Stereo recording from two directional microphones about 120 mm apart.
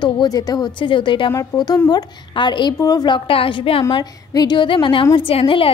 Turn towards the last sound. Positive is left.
turn(degrees=50)  # may be behind; listen again after turning